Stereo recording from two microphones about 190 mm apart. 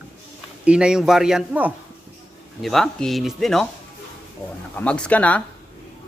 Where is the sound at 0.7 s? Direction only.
5° right (ahead or behind).